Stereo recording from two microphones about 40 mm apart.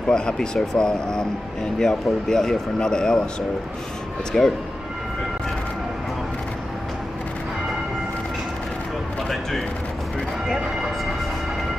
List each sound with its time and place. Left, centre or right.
0.1 s speech: centre
4.3 s speech: centre